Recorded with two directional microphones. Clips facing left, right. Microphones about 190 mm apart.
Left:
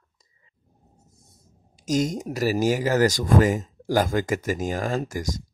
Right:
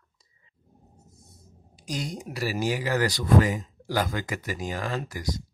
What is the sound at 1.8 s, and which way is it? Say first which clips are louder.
Speech: left 9 dB; 45° left (ahead or behind).